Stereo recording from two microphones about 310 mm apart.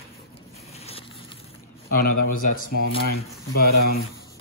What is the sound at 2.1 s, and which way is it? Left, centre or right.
Speech, left.